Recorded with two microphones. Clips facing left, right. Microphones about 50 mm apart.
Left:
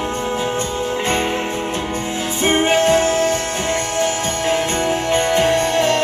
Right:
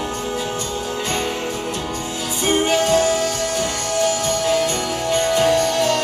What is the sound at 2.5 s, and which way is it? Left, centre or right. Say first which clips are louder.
Music: left 2 dB; left.